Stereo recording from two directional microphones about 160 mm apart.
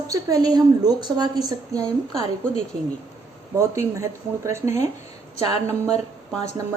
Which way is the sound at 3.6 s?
20° right (ahead or behind).